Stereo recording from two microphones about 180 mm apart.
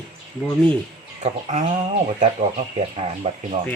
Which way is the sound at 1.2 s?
40° right (ahead or behind).